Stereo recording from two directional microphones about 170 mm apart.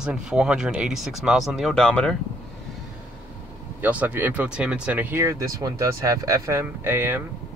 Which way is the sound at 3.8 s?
10° right (ahead or behind).